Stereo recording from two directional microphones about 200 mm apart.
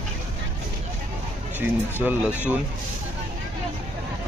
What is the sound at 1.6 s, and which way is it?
Speech, 10° right (ahead or behind).